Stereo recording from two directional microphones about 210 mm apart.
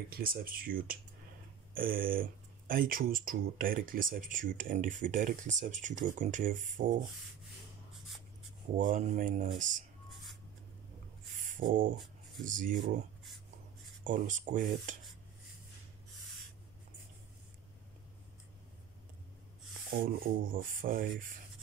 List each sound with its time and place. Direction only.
0.1 s speech: 45° right (ahead or behind)
8.7 s speech: 40° right (ahead or behind)
11.6 s a sound: 40° right (ahead or behind)
12.4 s speech: 40° right (ahead or behind)
14.0 s speech: 40° right (ahead or behind)
20.0 s speech: 40° right (ahead or behind)